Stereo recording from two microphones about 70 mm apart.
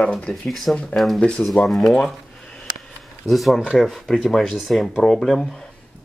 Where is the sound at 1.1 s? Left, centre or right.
Centre.